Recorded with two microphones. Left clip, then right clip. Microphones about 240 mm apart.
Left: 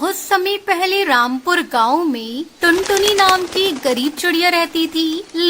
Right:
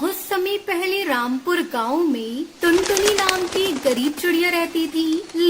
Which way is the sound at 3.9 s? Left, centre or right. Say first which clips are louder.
Left 3 dB; left.